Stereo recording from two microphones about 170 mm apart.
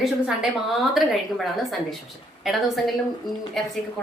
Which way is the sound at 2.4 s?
Centre (ahead or behind).